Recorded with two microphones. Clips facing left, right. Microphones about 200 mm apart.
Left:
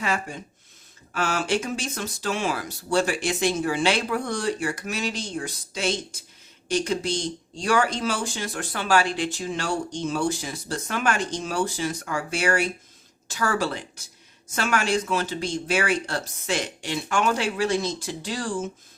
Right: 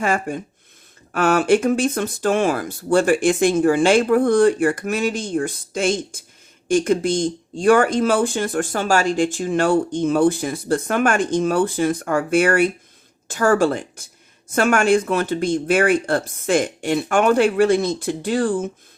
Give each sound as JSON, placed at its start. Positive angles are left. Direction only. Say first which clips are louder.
{"t": 0.0, "sound": "speech", "louder": "right 7 dB", "side_deg": -50}